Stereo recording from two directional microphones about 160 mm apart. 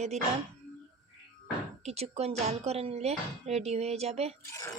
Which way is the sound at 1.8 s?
40° right (ahead or behind).